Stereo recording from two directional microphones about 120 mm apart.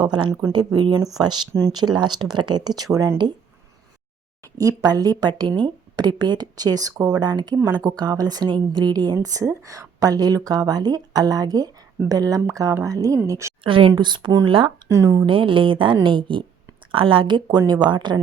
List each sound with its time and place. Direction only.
0.0 s a woman's voice: 40° right (ahead or behind)
4.5 s a woman's voice: 30° right (ahead or behind)
13.7 s a woman's voice: 45° right (ahead or behind)
14.8 s speech: 25° right (ahead or behind)
15.3 s a woman's voice: 45° right (ahead or behind)